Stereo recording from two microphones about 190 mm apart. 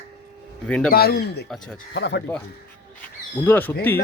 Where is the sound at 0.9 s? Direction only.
55° left (ahead or behind).